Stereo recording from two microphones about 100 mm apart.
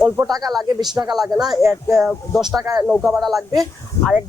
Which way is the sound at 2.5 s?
35° right (ahead or behind).